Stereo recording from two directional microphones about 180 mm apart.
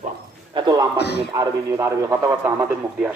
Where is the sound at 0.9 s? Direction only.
65° left (ahead or behind).